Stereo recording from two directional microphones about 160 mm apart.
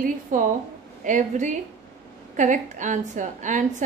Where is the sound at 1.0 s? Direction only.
50° right (ahead or behind).